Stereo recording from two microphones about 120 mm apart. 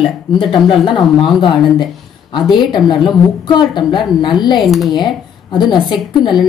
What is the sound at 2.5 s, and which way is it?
Speech, 40° left (ahead or behind).